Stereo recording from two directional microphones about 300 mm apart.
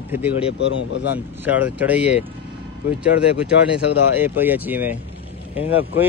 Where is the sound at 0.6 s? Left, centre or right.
Left.